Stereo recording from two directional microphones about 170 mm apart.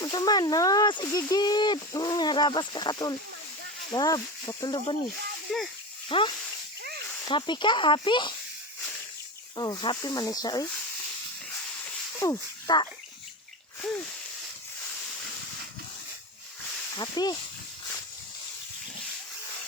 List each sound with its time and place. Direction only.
0.0 s speech: 25° left (ahead or behind)
5.5 s speech: centre (ahead or behind)
6.1 s speech: 30° left (ahead or behind)
9.6 s speech: 25° left (ahead or behind)
11.8 s a sound: 15° left (ahead or behind)
16.9 s speech: 25° left (ahead or behind)